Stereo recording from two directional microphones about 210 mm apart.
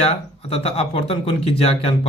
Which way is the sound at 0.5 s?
30° left (ahead or behind).